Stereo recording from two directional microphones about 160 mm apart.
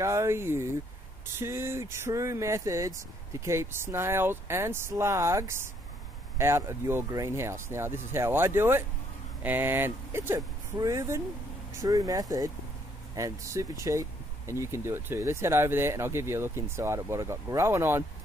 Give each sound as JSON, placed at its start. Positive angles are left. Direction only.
{"t": 0.0, "sound": "speech", "side_deg": -15}